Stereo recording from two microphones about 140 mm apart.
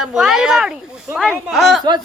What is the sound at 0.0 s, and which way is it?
Speech, 5° right (ahead or behind).